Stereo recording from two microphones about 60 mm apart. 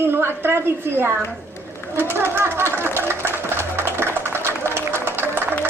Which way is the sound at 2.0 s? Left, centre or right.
Right.